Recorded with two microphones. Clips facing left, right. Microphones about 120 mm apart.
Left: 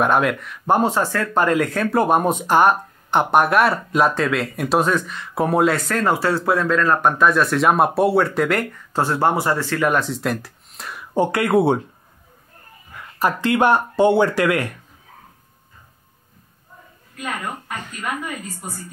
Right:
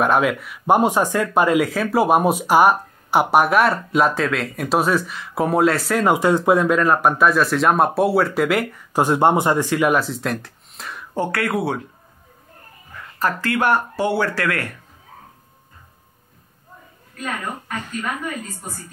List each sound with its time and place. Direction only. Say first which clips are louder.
0.0 s speech: even; centre (ahead or behind)
8.9 s speech: right 3 dB; 15° right (ahead or behind); by 11.1 s centre (ahead or behind)
11.1 s speech: left 5 dB; 20° left (ahead or behind)
13.2 s speech: left 3 dB; 20° left (ahead or behind)
17.2 s speech: even; 10° left (ahead or behind)